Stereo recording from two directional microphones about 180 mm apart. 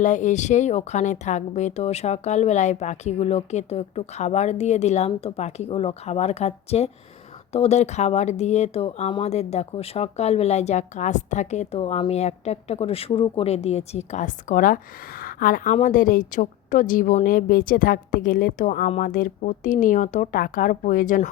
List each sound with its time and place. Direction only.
0.0 s speech: 45° left (ahead or behind)